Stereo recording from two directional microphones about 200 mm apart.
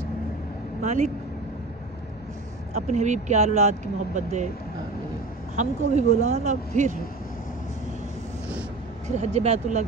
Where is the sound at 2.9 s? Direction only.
35° right (ahead or behind).